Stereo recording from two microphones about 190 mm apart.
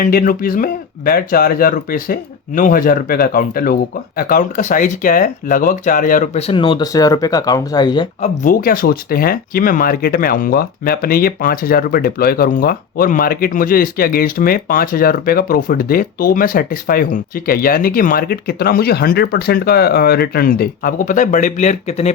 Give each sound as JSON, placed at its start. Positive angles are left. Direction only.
{"t": 0.0, "sound": "speech", "side_deg": 50}
{"t": 6.5, "sound": "speech", "side_deg": 25}
{"t": 8.2, "sound": "speech", "side_deg": 45}